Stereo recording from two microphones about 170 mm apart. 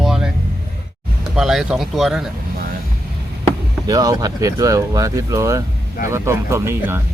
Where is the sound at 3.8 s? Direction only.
20° right (ahead or behind).